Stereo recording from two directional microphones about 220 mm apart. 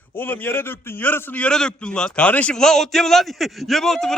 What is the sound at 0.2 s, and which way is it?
A man's voice, 10° left (ahead or behind).